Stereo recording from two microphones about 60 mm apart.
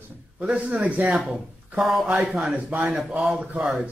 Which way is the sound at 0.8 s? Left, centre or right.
Right.